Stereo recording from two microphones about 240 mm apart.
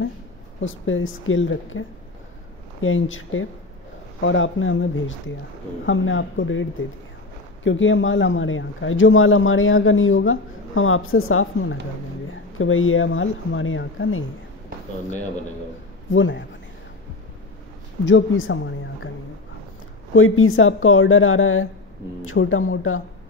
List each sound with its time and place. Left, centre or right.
0.6 s speech: left
16.1 s speech: left
18.0 s speech: left
20.2 s speech: left